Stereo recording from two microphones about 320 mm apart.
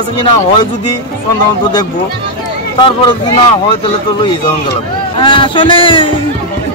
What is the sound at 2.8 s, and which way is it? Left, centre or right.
Speech, centre.